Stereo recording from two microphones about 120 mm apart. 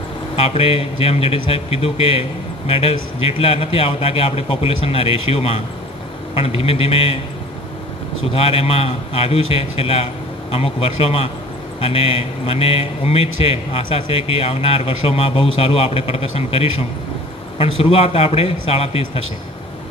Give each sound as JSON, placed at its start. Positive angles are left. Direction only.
{"t": 0.4, "sound": "a man's voice", "side_deg": 55}
{"t": 8.3, "sound": "a man's voice", "side_deg": 55}